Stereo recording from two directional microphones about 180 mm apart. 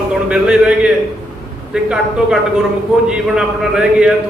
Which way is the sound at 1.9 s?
5° right (ahead or behind).